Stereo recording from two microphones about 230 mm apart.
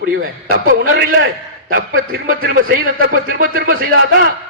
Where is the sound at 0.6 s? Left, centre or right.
Right.